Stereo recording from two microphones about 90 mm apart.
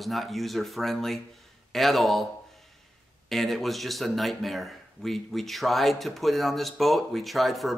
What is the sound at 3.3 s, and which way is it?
Speech, centre (ahead or behind).